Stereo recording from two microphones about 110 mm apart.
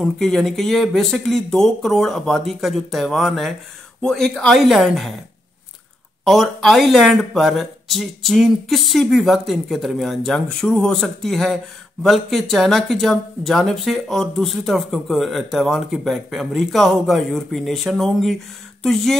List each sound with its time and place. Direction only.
0.0 s speech: 5° left (ahead or behind)
6.2 s speech: centre (ahead or behind)